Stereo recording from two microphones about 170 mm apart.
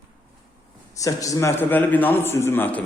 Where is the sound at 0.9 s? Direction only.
20° left (ahead or behind).